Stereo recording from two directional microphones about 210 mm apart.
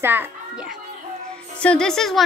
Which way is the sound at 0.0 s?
10° right (ahead or behind).